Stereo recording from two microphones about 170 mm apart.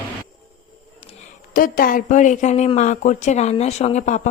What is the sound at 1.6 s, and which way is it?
Speech, 55° left (ahead or behind).